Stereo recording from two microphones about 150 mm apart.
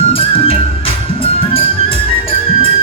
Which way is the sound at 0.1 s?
40° left (ahead or behind).